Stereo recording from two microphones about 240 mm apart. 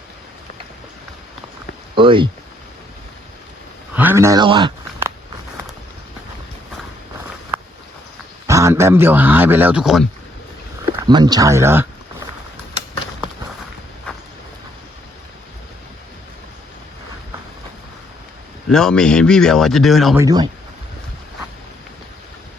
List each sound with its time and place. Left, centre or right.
2.0 s speech: right
3.9 s a sound: centre
8.4 s a man's voice: centre
10.9 s a man's voice: centre
18.7 s speech: centre
20.1 s a man's voice: centre